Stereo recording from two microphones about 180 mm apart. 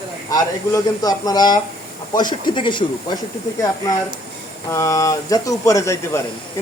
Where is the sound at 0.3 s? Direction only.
20° left (ahead or behind).